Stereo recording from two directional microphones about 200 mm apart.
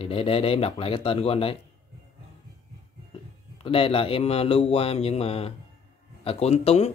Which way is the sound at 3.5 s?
30° left (ahead or behind).